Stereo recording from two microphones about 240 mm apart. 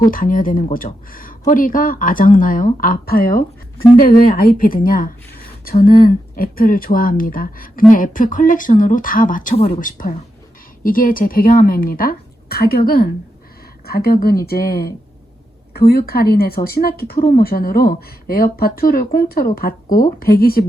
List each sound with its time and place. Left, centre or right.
0.0 s speech: left